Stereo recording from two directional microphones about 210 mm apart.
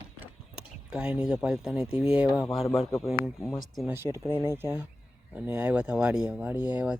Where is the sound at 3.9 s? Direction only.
10° right (ahead or behind).